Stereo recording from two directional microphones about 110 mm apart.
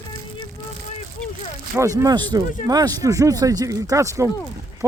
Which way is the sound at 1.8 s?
30° right (ahead or behind).